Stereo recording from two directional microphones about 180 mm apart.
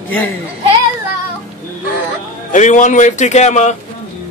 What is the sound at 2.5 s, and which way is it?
A man's voice, 45° left (ahead or behind).